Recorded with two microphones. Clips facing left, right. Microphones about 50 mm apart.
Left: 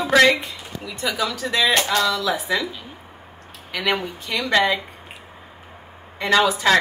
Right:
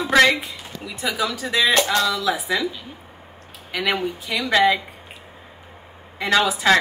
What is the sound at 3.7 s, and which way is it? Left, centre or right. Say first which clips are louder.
Speech: even; centre.